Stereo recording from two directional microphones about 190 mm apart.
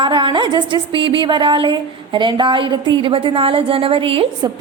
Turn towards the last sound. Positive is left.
turn(degrees=-30)  # may be behind; listen again after turning